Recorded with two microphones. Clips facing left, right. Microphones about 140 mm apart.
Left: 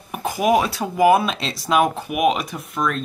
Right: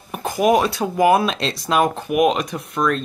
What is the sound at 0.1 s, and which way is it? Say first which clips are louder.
Speech: right 1 dB; 5° left (ahead or behind).